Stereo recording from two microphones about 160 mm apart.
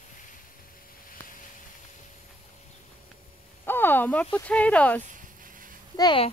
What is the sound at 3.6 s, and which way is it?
Speech, 15° left (ahead or behind).